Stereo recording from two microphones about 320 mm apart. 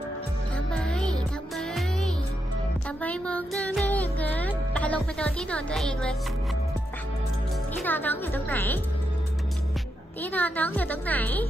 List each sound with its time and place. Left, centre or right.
0.7 s music: centre
7.8 s a woman's voice: centre
10.2 s a woman's voice: centre